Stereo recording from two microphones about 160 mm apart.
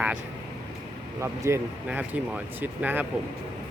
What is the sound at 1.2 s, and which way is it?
Speech, 15° right (ahead or behind).